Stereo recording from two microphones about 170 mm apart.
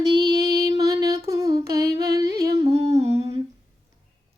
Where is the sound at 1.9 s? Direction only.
20° right (ahead or behind).